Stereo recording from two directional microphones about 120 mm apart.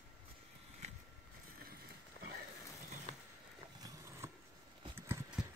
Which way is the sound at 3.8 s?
30° right (ahead or behind).